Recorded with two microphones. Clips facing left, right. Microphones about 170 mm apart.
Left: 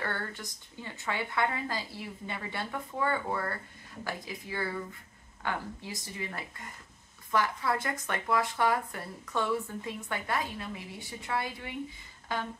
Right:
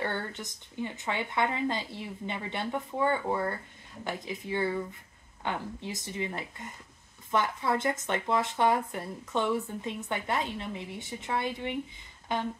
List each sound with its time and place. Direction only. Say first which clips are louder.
0.0 s speech: right 3 dB; 20° right (ahead or behind)